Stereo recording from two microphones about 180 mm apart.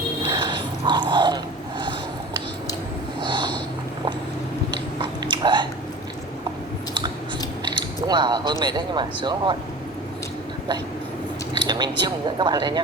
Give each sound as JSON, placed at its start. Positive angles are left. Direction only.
{"t": 0.3, "sound": "a sound", "side_deg": -25}
{"t": 3.2, "sound": "snort", "side_deg": -25}
{"t": 4.9, "sound": "biting", "side_deg": -25}
{"t": 7.6, "sound": "speech", "side_deg": -25}
{"t": 11.5, "sound": "speech", "side_deg": -25}